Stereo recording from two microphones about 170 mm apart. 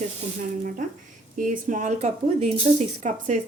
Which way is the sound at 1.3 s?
50° right (ahead or behind).